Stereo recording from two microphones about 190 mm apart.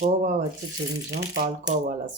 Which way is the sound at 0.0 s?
40° right (ahead or behind).